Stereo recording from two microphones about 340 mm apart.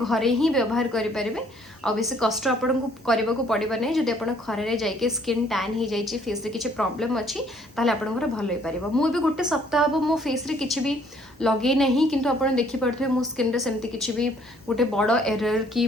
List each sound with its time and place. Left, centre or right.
0.0 s a woman's voice: centre